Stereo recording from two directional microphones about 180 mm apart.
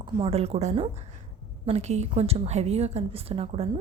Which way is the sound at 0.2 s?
35° right (ahead or behind).